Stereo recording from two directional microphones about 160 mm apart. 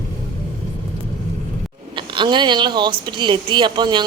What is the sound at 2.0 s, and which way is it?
Speech, 30° right (ahead or behind).